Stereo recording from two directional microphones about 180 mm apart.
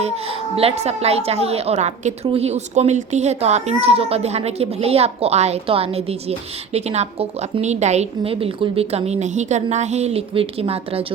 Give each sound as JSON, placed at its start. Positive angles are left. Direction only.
{"t": 0.0, "sound": "a woman's voice", "side_deg": -35}